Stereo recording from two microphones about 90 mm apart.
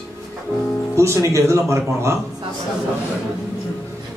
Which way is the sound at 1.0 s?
35° right (ahead or behind).